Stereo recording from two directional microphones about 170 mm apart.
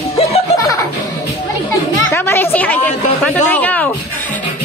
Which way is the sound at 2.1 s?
15° left (ahead or behind).